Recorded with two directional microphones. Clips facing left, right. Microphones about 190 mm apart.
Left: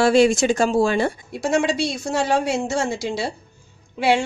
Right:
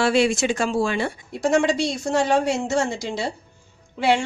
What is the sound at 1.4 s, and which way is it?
A woman's voice, 5° left (ahead or behind).